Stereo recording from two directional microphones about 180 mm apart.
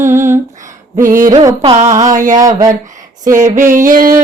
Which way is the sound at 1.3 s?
20° right (ahead or behind).